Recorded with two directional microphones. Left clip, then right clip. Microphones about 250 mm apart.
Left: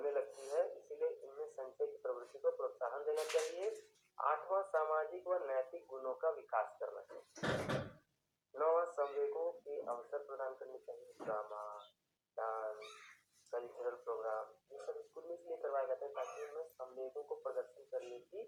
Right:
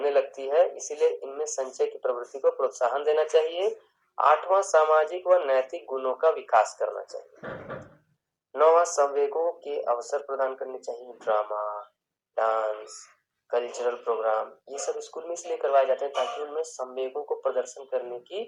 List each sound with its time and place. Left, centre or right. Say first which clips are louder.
0.0 s speech: right 15 dB; right
8.5 s speech: right 15 dB; right
12.3 s a sound: right 17 dB; right
13.5 s speech: right 16 dB; right
15.4 s speech: right 17 dB; right